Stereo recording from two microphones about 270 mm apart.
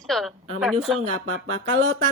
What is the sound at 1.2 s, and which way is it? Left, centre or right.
Music, right.